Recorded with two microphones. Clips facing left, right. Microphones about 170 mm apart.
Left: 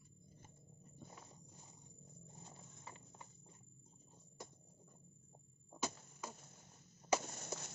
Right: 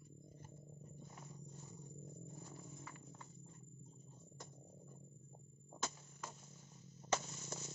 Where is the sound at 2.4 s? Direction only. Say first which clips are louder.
Right 4 dB; 25° left (ahead or behind).